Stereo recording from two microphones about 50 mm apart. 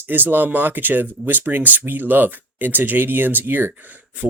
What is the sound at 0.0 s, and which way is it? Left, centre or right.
Speech, right.